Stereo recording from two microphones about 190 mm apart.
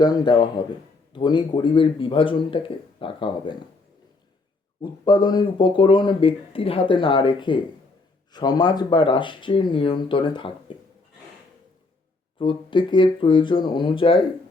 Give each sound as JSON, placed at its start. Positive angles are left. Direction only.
{"t": 0.0, "sound": "speech", "side_deg": 25}
{"t": 4.8, "sound": "speech", "side_deg": 20}
{"t": 12.4, "sound": "speech", "side_deg": 25}